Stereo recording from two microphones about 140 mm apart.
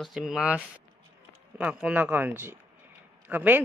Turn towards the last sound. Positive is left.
turn(degrees=-15)  # may be behind; listen again after turning